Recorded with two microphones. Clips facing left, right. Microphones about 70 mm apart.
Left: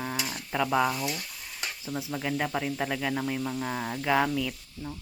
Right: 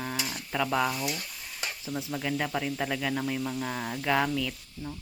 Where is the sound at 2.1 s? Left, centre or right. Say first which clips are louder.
Left 1 dB; centre.